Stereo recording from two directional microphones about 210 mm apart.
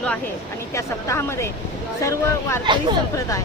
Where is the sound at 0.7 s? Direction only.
15° left (ahead or behind).